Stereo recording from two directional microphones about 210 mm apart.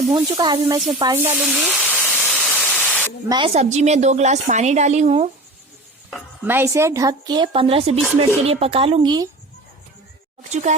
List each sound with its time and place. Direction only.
0.1 s speech: 20° right (ahead or behind); by 1.9 s 5° right (ahead or behind)
2.0 s static: 5° left (ahead or behind)
3.2 s a woman's voice: 25° right (ahead or behind)
6.1 s a sound: centre (ahead or behind)
6.5 s speech: 10° right (ahead or behind)
10.5 s a woman's voice: 35° right (ahead or behind)